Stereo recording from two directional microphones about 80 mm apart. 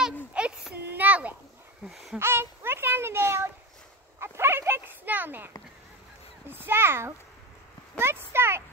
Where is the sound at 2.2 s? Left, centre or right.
Right.